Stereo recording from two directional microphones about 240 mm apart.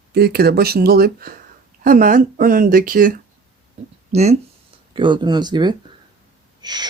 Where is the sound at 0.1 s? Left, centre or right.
Right.